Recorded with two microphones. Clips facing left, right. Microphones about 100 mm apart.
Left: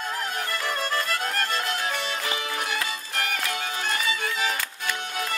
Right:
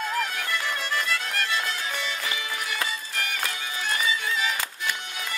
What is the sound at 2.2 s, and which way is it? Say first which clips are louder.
Music: left 2 dB; 35° left (ahead or behind).